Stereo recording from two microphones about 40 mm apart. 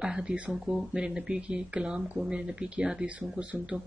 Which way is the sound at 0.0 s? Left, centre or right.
Centre.